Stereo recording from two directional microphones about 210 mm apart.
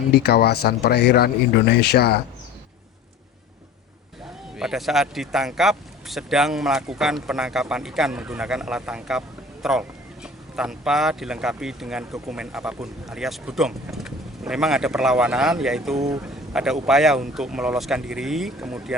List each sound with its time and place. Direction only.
0.1 s speech: 50° left (ahead or behind)
4.5 s speech: centre (ahead or behind)